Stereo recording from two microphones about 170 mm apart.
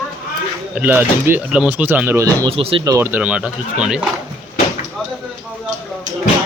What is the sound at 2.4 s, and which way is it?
Speech, 35° right (ahead or behind).